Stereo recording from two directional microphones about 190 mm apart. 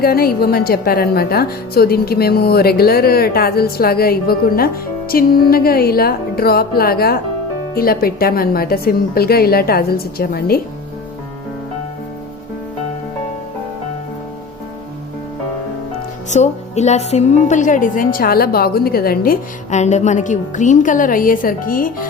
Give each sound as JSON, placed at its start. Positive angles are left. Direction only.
{"t": 0.0, "sound": "a woman's voice", "side_deg": 55}
{"t": 16.3, "sound": "a woman's voice", "side_deg": 35}